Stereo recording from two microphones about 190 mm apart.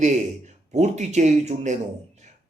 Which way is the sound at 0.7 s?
35° right (ahead or behind).